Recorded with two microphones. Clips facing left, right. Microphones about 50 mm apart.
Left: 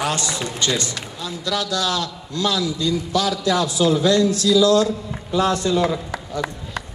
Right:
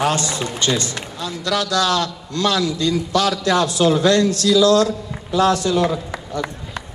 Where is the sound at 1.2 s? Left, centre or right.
Right.